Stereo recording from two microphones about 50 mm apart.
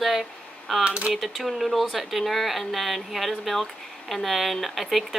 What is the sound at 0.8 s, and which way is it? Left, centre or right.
Speech, centre.